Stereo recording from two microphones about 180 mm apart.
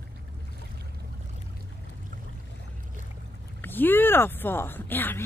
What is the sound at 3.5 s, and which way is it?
Speech, 10° left (ahead or behind).